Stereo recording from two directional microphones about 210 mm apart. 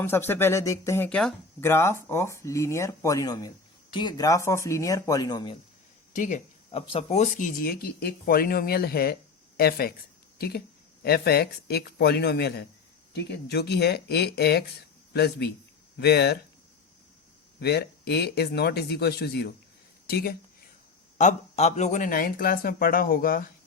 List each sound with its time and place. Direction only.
0.0 s speech: 10° left (ahead or behind)
6.1 s speech: 35° left (ahead or behind)
17.6 s speech: 50° left (ahead or behind)
21.2 s speech: 35° left (ahead or behind)